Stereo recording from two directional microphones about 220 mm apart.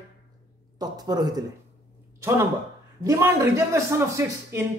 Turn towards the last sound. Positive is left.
turn(degrees=-10)  # may be behind; listen again after turning